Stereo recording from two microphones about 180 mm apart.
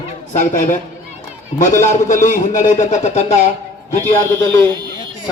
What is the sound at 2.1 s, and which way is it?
Speech, 45° left (ahead or behind).